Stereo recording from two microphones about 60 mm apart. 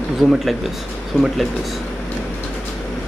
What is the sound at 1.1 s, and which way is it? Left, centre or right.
Speech, left.